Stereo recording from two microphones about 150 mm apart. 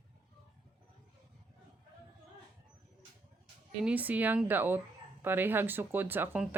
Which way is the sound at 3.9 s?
10° right (ahead or behind).